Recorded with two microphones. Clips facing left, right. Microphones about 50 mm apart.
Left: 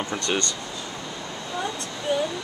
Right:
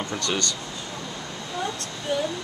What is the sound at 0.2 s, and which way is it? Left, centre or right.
Speech, left.